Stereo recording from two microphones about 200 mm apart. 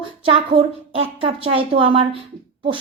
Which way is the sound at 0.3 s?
25° right (ahead or behind).